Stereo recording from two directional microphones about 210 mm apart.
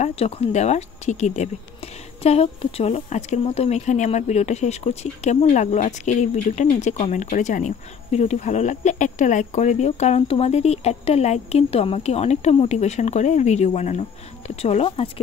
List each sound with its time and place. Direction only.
0.0 s a woman's voice: 30° left (ahead or behind)